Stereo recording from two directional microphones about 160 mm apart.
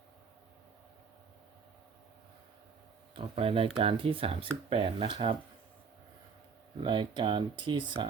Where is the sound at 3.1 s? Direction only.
35° right (ahead or behind).